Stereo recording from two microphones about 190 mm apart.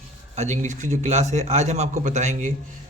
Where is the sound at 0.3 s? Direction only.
40° right (ahead or behind).